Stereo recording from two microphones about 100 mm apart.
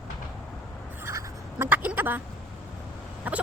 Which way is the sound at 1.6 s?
15° right (ahead or behind).